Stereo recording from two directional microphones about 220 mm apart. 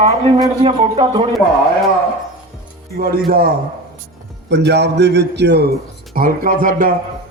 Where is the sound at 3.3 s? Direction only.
40° right (ahead or behind).